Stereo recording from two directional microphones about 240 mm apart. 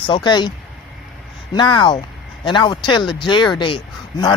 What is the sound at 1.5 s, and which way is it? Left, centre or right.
Speech, centre.